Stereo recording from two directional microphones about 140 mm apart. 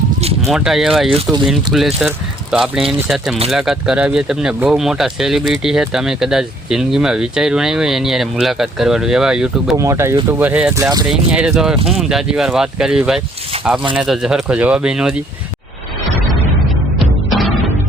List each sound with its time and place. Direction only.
0.4 s speech: centre (ahead or behind)
9.7 s speech: 20° right (ahead or behind)
10.8 s speech: 20° right (ahead or behind)
11.1 s speech: 5° right (ahead or behind)
17.2 s music: centre (ahead or behind)